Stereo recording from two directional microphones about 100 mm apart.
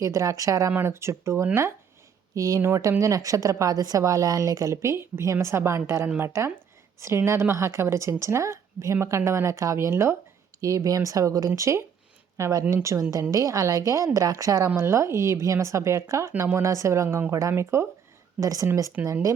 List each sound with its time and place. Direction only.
0.0 s a woman's voice: 30° right (ahead or behind)
19.0 s speech: 15° right (ahead or behind)